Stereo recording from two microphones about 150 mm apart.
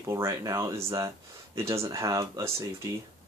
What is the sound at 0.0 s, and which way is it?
Speech, 20° right (ahead or behind).